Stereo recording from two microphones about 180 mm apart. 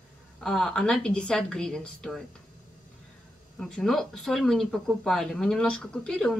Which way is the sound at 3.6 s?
5° left (ahead or behind).